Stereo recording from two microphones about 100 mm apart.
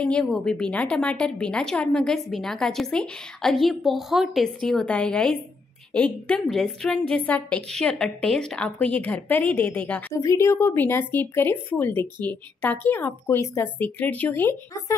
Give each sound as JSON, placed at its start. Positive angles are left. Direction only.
{"t": 0.0, "sound": "a woman's voice", "side_deg": 10}
{"t": 10.1, "sound": "a woman's voice", "side_deg": 30}